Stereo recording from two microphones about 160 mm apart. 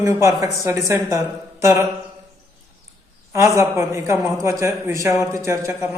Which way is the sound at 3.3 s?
20° right (ahead or behind).